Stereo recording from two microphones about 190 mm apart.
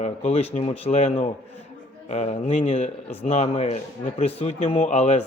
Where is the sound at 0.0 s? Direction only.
35° left (ahead or behind).